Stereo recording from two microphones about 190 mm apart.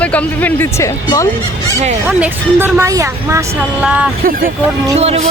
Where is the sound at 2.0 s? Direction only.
10° right (ahead or behind).